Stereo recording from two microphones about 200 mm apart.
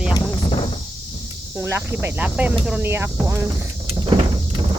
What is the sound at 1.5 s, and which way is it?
Speech, 15° right (ahead or behind).